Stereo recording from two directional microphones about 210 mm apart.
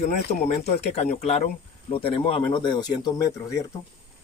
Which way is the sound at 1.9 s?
25° left (ahead or behind).